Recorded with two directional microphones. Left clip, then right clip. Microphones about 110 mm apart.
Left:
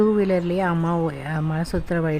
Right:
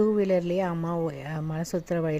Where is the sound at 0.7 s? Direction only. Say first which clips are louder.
Left 7 dB; 20° right (ahead or behind).